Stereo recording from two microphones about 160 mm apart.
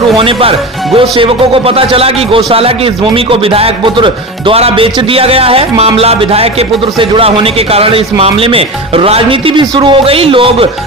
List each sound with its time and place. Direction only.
0.2 s a man's voice: 35° right (ahead or behind)